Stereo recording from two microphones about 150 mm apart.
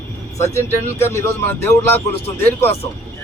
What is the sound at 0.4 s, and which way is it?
Speech, 15° left (ahead or behind).